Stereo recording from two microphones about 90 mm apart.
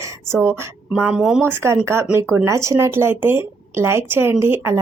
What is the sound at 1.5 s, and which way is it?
Speech, 30° right (ahead or behind).